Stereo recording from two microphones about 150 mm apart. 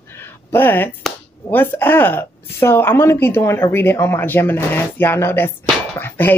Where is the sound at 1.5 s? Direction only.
15° left (ahead or behind).